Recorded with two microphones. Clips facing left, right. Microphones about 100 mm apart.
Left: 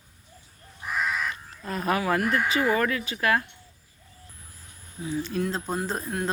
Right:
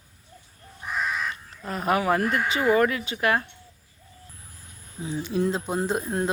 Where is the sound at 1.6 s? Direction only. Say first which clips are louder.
Right 2 dB; 20° right (ahead or behind).